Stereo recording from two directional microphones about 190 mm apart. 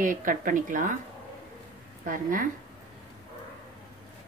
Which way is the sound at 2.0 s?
45° right (ahead or behind).